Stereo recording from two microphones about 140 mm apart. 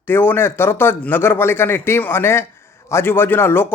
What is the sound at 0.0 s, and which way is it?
Speech, 15° left (ahead or behind).